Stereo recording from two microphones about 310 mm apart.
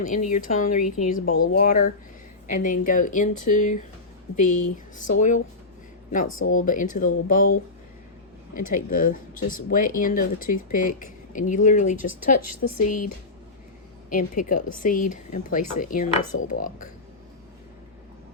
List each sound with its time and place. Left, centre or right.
0.0 s speech: left
6.2 s speech: left
6.7 s speech: left
12.4 s speech: left
14.1 s speech: left